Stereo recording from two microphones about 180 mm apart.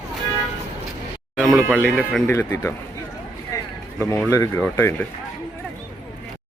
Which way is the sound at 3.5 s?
20° left (ahead or behind).